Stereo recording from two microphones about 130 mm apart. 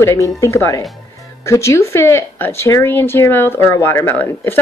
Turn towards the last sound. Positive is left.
turn(degrees=15)  # may be behind; listen again after turning